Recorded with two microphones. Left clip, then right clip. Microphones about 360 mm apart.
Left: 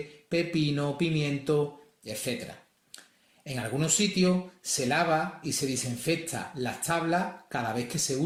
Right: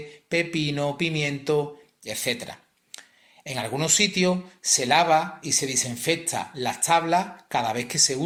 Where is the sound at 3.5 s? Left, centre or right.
Centre.